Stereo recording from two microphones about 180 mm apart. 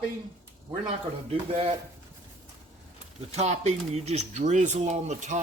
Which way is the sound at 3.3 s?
35° right (ahead or behind).